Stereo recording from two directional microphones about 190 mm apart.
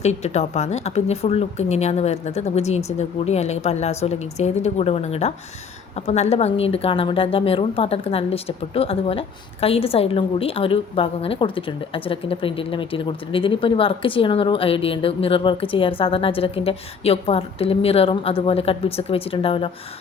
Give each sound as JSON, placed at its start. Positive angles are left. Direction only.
{"t": 0.0, "sound": "a woman's voice", "side_deg": 35}